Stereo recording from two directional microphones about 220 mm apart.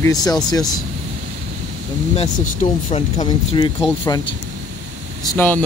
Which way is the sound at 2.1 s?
30° left (ahead or behind).